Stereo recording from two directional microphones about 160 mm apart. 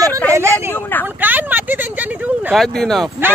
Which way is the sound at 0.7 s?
15° left (ahead or behind).